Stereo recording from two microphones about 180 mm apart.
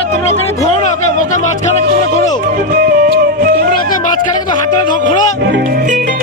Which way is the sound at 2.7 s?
50° right (ahead or behind).